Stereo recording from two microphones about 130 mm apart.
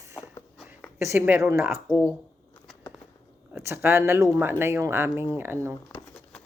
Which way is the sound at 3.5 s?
20° right (ahead or behind).